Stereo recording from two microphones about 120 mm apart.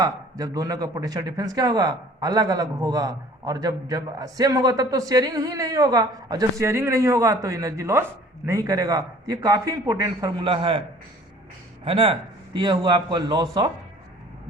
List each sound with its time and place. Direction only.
0.0 s a man's voice: 30° right (ahead or behind)
10.4 s a man's voice: 45° right (ahead or behind)
11.9 s a man's voice: 55° right (ahead or behind)
12.5 s a man's voice: 40° right (ahead or behind)